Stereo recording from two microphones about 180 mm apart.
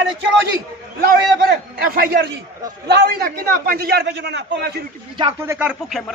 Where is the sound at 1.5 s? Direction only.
60° right (ahead or behind); by 4.8 s 75° right (ahead or behind).